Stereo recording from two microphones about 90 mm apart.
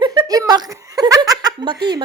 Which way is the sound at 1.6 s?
60° right (ahead or behind).